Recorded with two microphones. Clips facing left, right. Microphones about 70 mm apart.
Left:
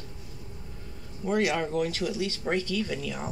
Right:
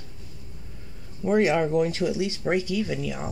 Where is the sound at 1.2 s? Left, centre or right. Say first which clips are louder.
Right 5 dB; right.